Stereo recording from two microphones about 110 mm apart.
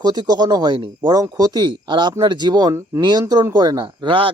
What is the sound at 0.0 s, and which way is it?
Speech, 40° right (ahead or behind).